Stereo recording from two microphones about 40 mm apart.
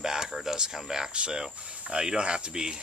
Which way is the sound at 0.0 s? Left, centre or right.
Centre.